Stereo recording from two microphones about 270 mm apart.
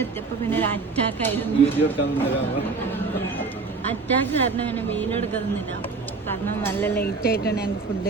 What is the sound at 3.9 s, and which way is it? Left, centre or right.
A man's voice, centre.